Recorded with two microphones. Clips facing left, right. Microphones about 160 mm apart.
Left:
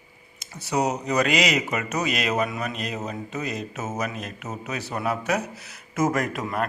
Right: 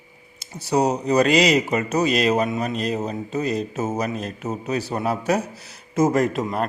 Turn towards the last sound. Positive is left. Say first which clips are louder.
# right 5 dB
turn(degrees=-25)  # may be behind; listen again after turning